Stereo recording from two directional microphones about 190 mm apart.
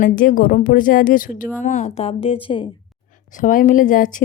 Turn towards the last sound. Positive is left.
turn(degrees=45)  # may be behind; listen again after turning